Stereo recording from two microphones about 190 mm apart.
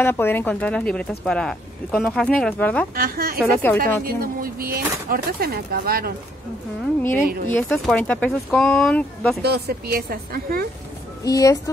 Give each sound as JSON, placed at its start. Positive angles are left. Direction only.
{"t": 0.0, "sound": "speech", "side_deg": 10}
{"t": 3.0, "sound": "speech", "side_deg": -50}
{"t": 3.5, "sound": "speech", "side_deg": 10}
{"t": 4.0, "sound": "speech", "side_deg": -50}
{"t": 7.4, "sound": "speech", "side_deg": 5}
{"t": 9.4, "sound": "speech", "side_deg": -55}
{"t": 11.2, "sound": "speech", "side_deg": 20}